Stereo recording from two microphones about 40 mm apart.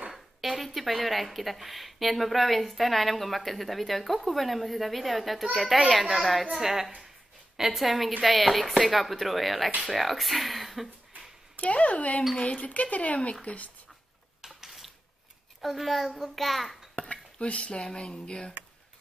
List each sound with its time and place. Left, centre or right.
0.1 s a woman's voice: centre
11.5 s speech: left
14.4 s a sound: centre
15.6 s a child's voice: centre
16.9 s speech: left